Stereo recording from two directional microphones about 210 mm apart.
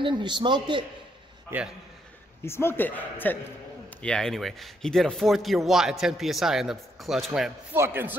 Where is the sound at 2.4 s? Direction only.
10° left (ahead or behind).